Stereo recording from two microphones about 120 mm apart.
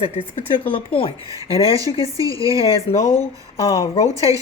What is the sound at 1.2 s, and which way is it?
Speech, 30° right (ahead or behind).